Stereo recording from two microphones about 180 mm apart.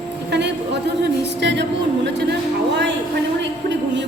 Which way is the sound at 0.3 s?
75° right (ahead or behind).